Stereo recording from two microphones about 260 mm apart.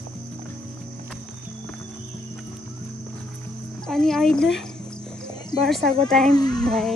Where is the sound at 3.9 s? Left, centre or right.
Centre.